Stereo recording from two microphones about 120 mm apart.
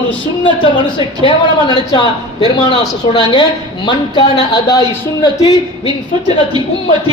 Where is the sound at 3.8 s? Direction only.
40° left (ahead or behind).